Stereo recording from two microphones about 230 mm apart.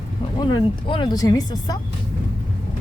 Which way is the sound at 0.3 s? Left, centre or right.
Centre.